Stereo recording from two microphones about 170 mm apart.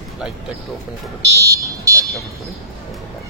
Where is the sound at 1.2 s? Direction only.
20° right (ahead or behind).